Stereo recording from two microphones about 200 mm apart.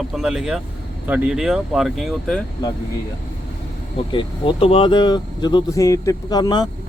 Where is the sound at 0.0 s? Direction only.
Centre (ahead or behind).